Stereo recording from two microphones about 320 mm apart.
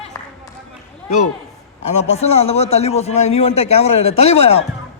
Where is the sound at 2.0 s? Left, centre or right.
Centre.